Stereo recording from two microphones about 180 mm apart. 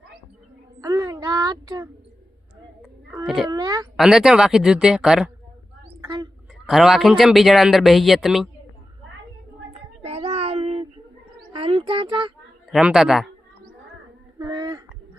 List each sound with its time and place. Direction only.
0.8 s child singing: 20° right (ahead or behind)
3.2 s a man's voice: centre (ahead or behind)
3.5 s speech: 20° right (ahead or behind)
3.9 s a man's voice: 5° right (ahead or behind)
6.0 s a sound: 20° right (ahead or behind)
6.7 s a man's voice: centre (ahead or behind)
10.0 s child singing: 35° right (ahead or behind)
11.5 s a sound: 30° right (ahead or behind)
12.7 s a man's voice: 5° right (ahead or behind)
14.3 s a sound: 25° right (ahead or behind)